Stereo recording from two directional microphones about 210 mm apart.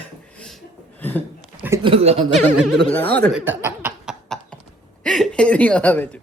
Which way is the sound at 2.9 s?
10° left (ahead or behind).